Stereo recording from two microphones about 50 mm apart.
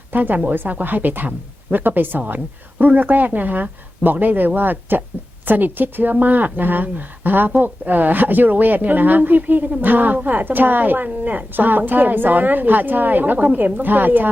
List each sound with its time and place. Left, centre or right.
0.1 s speech: right